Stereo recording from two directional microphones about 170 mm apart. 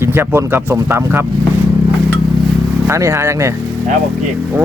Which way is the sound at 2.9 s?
15° right (ahead or behind).